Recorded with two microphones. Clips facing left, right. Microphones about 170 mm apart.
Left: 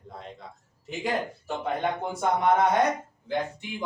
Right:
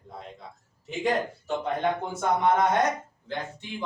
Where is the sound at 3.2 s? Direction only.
15° left (ahead or behind).